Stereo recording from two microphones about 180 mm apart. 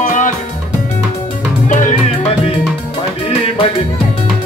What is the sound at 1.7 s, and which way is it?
Music, 45° left (ahead or behind).